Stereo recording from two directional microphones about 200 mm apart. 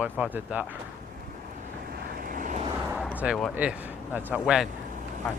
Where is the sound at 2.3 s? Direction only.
40° right (ahead or behind).